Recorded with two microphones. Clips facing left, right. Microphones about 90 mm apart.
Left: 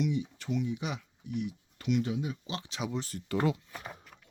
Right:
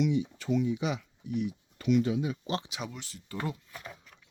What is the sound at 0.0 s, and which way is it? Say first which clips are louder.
Speech: right 3 dB; 90° right.